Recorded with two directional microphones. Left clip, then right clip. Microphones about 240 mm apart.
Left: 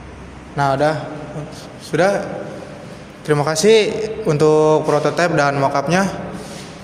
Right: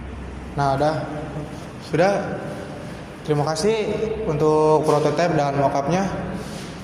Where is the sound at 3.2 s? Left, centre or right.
Left.